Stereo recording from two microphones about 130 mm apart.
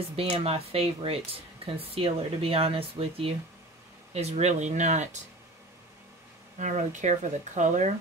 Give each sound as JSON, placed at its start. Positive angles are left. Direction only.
{"t": 0.1, "sound": "speech", "side_deg": -50}
{"t": 6.6, "sound": "speech", "side_deg": -70}